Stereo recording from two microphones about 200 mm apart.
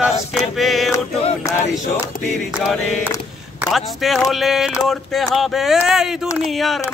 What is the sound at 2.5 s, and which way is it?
Mantra, 5° right (ahead or behind).